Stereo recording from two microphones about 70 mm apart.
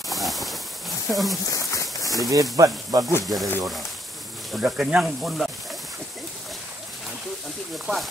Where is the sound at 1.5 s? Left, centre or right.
Left.